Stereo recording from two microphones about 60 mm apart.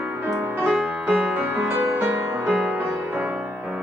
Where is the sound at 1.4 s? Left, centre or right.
Right.